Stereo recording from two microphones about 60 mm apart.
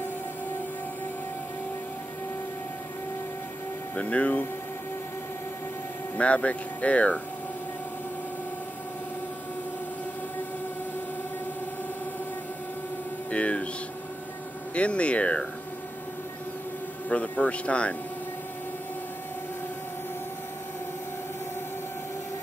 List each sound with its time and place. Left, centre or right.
3.9 s speech: left
6.1 s speech: left
13.3 s speech: left
14.7 s speech: centre
17.1 s speech: left